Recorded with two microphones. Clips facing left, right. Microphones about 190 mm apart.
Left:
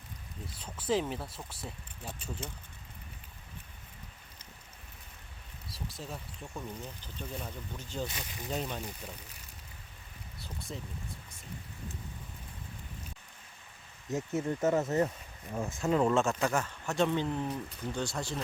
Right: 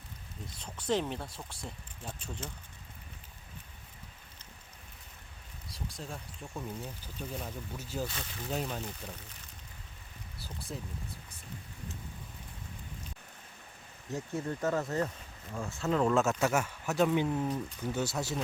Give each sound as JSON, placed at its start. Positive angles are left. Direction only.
{"t": 0.6, "sound": "speech", "side_deg": 5}
{"t": 5.6, "sound": "speech", "side_deg": 0}
{"t": 8.0, "sound": "speech", "side_deg": 15}
{"t": 8.4, "sound": "speech", "side_deg": -5}
{"t": 10.4, "sound": "speech", "side_deg": 0}
{"t": 14.1, "sound": "speech", "side_deg": 20}
{"t": 16.2, "sound": "speech", "side_deg": -5}